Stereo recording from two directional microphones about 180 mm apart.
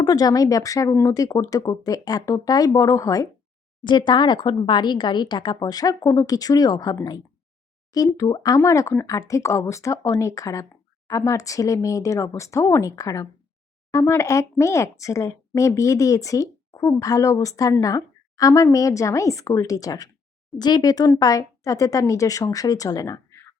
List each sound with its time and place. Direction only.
0.0 s speech: 20° left (ahead or behind)